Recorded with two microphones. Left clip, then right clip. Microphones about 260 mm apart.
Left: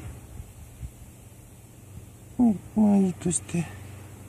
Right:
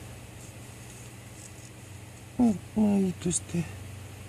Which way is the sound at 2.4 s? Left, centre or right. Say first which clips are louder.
Left 3 dB; centre.